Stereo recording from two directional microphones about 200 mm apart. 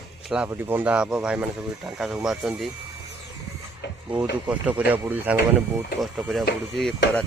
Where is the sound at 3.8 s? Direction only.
60° left (ahead or behind).